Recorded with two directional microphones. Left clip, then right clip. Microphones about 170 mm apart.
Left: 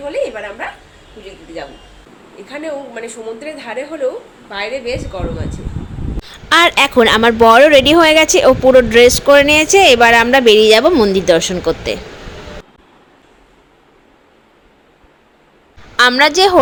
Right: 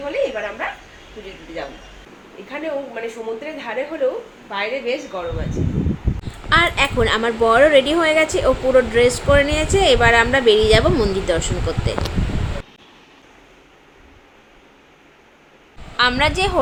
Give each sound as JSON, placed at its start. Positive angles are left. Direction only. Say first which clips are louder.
{"t": 2.5, "sound": "a woman's voice", "louder": "left 1 dB", "side_deg": 15}
{"t": 6.2, "sound": "a woman's voice", "louder": "left 6 dB", "side_deg": 60}
{"t": 16.0, "sound": "a woman's voice", "louder": "left 7 dB", "side_deg": 45}